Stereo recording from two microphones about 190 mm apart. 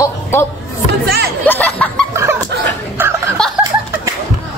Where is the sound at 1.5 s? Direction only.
10° left (ahead or behind).